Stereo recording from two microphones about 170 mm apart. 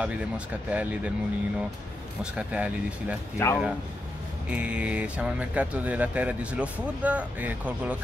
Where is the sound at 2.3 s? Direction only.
10° right (ahead or behind).